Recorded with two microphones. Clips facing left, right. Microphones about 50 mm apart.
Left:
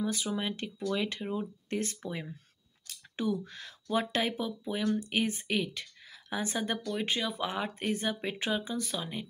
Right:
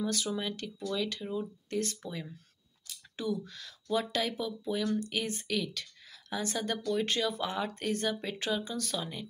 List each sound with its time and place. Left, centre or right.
0.0 s speech: centre